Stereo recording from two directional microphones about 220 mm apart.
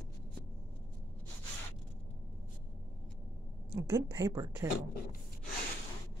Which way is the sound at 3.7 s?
15° right (ahead or behind).